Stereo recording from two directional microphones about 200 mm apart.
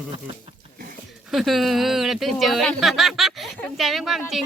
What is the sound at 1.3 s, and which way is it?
Speech, centre (ahead or behind).